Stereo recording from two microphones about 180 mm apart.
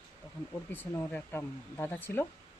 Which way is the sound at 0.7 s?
10° left (ahead or behind).